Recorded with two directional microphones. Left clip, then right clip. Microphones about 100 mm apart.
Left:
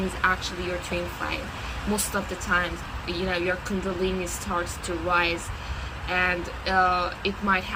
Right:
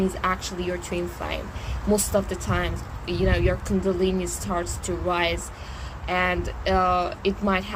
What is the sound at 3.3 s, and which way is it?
Speech, 35° right (ahead or behind).